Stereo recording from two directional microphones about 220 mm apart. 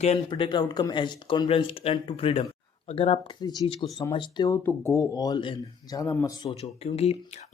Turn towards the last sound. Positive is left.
turn(degrees=30)  # may be behind; listen again after turning